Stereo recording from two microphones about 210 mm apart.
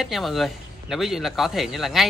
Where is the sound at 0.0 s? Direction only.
Centre (ahead or behind).